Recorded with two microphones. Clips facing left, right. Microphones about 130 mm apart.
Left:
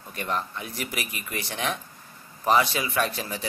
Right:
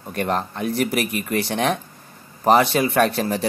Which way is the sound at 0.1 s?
60° right (ahead or behind).